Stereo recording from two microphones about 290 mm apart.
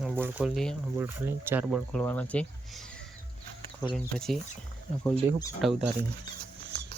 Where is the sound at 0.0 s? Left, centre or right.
Centre.